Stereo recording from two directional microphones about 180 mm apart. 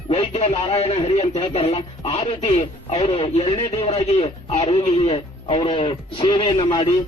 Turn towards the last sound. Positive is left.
turn(degrees=25)  # may be behind; listen again after turning